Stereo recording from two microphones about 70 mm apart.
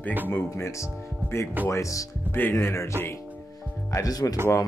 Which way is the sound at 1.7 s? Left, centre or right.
Left.